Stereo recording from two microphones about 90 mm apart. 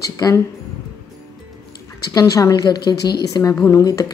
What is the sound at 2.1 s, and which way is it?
A woman's voice, 40° left (ahead or behind).